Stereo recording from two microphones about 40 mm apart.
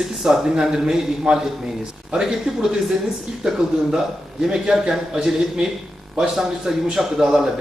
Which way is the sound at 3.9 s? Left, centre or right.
Centre.